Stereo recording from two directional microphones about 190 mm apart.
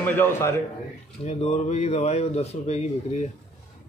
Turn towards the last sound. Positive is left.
turn(degrees=35)  # may be behind; listen again after turning